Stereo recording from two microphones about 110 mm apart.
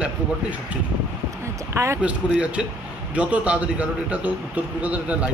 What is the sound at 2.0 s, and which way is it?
A man's voice, 10° right (ahead or behind).